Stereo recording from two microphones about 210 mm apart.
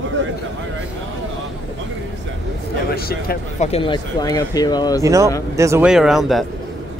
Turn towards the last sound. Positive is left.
turn(degrees=0)  # may be behind; listen again after turning